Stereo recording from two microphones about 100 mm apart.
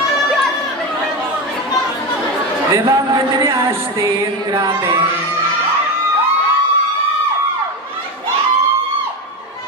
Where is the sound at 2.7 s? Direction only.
35° right (ahead or behind).